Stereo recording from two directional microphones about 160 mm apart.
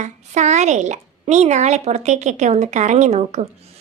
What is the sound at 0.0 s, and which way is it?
A woman's voice, 45° right (ahead or behind).